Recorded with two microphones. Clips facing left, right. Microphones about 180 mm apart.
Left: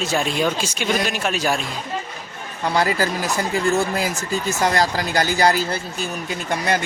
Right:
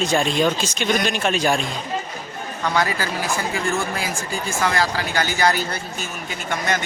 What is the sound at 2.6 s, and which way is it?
Speech, 35° left (ahead or behind).